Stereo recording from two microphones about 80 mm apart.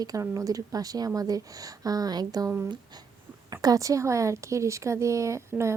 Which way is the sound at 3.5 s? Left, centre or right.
Right.